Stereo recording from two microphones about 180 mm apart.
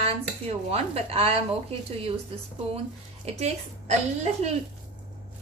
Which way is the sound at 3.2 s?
40° right (ahead or behind).